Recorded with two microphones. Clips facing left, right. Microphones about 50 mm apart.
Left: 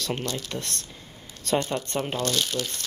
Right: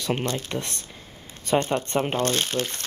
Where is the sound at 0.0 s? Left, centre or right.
Right.